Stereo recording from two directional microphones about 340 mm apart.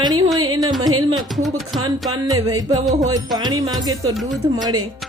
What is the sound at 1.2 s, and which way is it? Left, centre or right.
Speech, centre.